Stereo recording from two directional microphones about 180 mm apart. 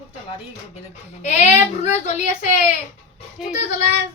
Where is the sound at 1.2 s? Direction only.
40° left (ahead or behind).